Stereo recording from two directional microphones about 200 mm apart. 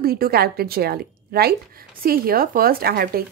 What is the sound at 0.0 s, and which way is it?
A woman's voice, 50° right (ahead or behind).